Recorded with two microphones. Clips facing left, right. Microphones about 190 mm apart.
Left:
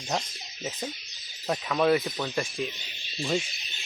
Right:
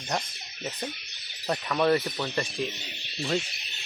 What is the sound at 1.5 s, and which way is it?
Speech, 5° left (ahead or behind).